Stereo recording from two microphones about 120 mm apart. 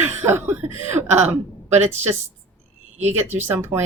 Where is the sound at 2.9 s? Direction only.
70° right (ahead or behind).